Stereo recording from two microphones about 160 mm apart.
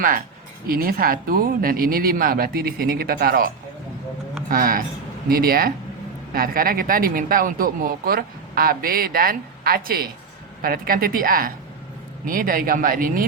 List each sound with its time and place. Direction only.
0.7 s speech: 65° right (ahead or behind)